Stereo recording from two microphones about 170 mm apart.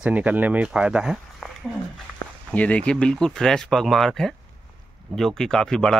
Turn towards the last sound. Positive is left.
turn(degrees=5)  # may be behind; listen again after turning